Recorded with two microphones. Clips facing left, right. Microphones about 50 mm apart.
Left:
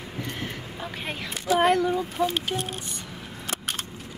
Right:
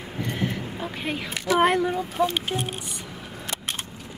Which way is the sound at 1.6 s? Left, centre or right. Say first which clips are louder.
Even; right.